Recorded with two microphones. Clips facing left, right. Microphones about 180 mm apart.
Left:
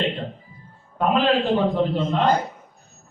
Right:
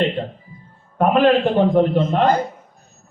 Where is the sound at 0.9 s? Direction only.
55° right (ahead or behind).